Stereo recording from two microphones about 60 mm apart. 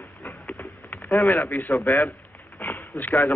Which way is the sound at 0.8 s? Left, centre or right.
Left.